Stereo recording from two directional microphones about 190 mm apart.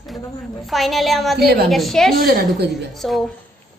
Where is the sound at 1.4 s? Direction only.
55° right (ahead or behind).